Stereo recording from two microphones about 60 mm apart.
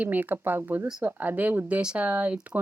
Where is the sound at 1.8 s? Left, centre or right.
Centre.